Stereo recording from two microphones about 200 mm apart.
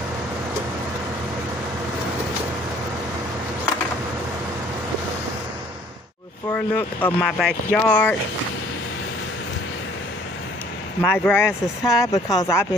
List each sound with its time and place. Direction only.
6.5 s speech: 10° left (ahead or behind)
11.0 s speech: 10° left (ahead or behind)